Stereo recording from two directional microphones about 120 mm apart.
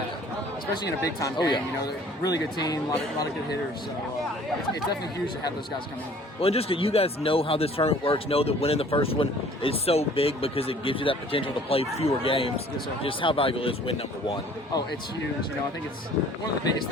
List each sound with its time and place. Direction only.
0.8 s speech: 35° left (ahead or behind)
6.4 s speech: 55° left (ahead or behind)